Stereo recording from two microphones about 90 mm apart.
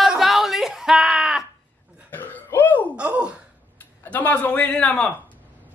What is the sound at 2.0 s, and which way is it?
Burping, 20° left (ahead or behind).